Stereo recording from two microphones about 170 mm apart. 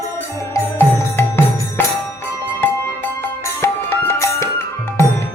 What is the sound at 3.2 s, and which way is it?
Music, 15° left (ahead or behind).